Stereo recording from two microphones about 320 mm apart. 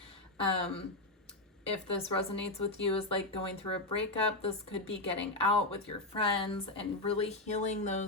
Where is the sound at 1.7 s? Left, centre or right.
Centre.